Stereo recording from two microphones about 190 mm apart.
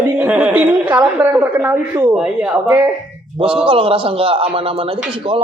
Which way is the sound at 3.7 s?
30° right (ahead or behind).